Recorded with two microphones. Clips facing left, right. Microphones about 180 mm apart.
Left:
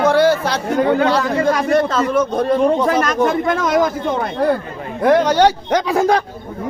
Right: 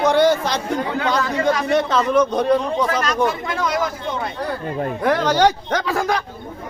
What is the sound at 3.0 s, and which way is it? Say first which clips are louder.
Speech: left 4 dB; 50° left (ahead or behind).